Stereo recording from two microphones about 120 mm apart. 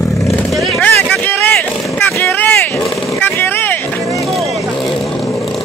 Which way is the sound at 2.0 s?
20° left (ahead or behind).